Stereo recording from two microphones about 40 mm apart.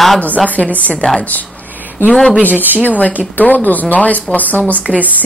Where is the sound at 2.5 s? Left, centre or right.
Right.